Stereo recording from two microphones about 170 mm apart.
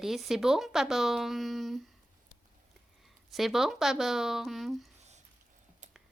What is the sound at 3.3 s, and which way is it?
Speech, centre (ahead or behind).